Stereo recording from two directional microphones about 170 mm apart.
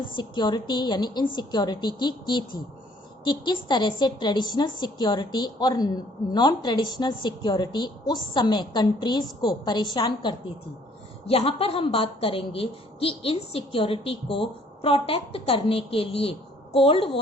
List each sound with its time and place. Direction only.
0.0 s a woman's voice: 30° left (ahead or behind)